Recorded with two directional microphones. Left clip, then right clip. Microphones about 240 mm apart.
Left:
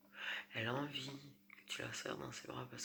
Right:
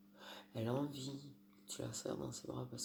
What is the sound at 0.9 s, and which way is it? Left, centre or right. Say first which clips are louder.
Speech: left 2 dB; right.